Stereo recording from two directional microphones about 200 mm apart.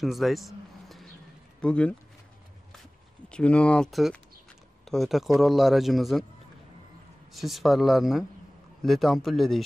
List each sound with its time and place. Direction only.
0.0 s vehicle: centre (ahead or behind)
1.6 s speech: 5° left (ahead or behind)
3.3 s speech: 5° left (ahead or behind)
7.3 s speech: centre (ahead or behind)